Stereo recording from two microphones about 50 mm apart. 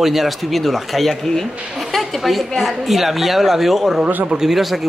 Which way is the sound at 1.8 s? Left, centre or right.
Centre.